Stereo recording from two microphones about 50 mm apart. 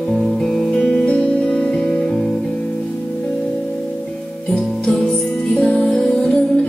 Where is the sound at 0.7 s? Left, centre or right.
Left.